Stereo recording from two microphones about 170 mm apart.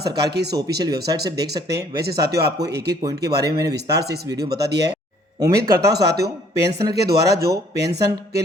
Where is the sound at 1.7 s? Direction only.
70° right (ahead or behind).